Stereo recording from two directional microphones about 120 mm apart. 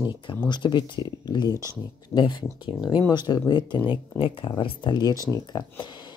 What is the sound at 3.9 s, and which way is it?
Speech, 45° left (ahead or behind).